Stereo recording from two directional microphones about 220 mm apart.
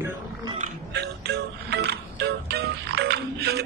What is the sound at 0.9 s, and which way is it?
Music, 50° right (ahead or behind).